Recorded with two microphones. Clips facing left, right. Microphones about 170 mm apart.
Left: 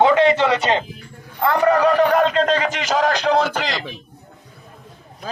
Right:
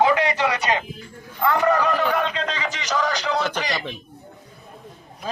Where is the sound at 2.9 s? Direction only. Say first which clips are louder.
Left 5 dB; 90° left.